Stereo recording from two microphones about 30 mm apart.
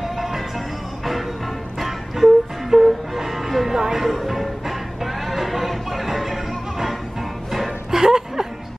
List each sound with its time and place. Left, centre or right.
0.0 s music: centre
3.8 s speech: centre
4.3 s music: centre
7.9 s chuckle: centre